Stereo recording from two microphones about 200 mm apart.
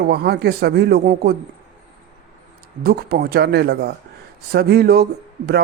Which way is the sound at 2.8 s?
50° right (ahead or behind).